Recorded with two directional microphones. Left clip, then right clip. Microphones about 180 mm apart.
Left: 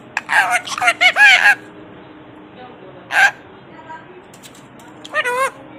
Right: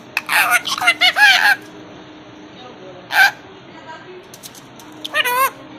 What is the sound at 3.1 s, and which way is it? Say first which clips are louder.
Fowl: even; 20° left (ahead or behind).